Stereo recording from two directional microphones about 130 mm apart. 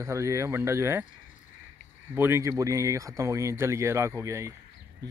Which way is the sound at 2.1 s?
20° right (ahead or behind).